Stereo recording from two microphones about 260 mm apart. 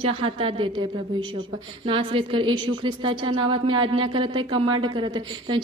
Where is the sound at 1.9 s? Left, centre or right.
Centre.